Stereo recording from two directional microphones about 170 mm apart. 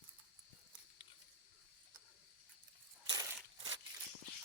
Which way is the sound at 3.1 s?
25° right (ahead or behind).